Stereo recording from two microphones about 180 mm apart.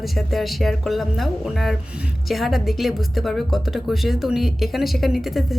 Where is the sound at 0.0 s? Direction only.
Centre (ahead or behind).